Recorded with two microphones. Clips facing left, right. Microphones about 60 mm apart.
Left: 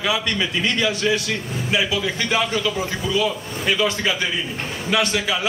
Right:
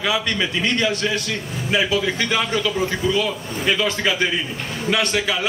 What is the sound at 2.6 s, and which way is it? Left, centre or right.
A man's voice, centre.